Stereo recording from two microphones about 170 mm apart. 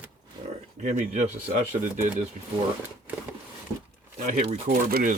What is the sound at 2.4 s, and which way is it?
Speech, 45° right (ahead or behind).